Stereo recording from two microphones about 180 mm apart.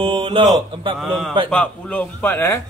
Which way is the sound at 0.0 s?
30° right (ahead or behind).